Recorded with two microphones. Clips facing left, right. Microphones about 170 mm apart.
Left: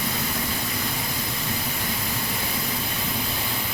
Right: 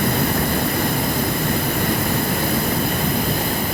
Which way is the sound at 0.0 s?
55° right (ahead or behind).